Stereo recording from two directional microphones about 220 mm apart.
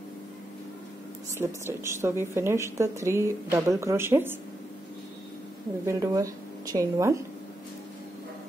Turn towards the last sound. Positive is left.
turn(degrees=-15)  # may be behind; listen again after turning